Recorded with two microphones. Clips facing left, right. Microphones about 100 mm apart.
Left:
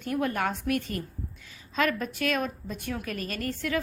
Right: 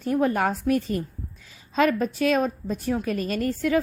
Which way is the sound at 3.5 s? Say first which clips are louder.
Right 7 dB; 40° right (ahead or behind).